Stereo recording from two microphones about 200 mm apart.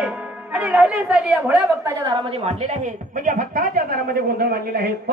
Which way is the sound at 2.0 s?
30° right (ahead or behind).